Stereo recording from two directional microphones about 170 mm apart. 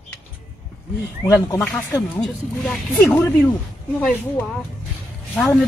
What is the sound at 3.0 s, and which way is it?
Speech, 15° left (ahead or behind).